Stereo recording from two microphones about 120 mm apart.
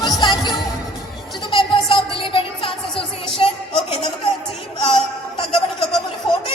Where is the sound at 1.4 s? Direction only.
45° left (ahead or behind).